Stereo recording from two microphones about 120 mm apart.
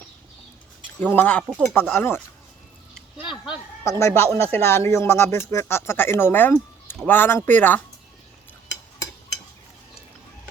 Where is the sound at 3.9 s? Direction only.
25° left (ahead or behind).